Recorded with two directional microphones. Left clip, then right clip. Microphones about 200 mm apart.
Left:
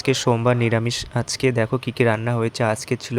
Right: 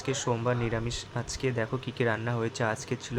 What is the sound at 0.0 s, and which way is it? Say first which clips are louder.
Speech: left 10 dB; 40° left (ahead or behind).